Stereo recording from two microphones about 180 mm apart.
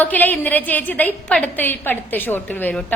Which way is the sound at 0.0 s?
10° left (ahead or behind).